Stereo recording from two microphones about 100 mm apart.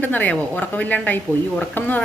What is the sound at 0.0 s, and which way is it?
A woman's voice, 15° left (ahead or behind).